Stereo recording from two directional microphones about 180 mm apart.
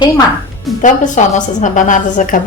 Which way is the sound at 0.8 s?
45° left (ahead or behind).